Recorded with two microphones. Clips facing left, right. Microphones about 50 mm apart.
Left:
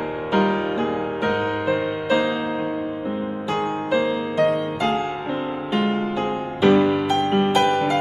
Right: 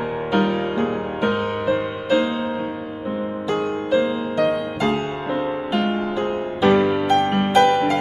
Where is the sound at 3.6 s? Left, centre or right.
Left.